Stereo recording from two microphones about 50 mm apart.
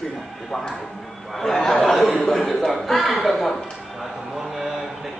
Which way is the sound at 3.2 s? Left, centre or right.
Centre.